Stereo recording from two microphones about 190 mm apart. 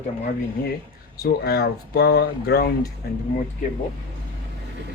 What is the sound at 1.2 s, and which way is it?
Speech, 55° left (ahead or behind).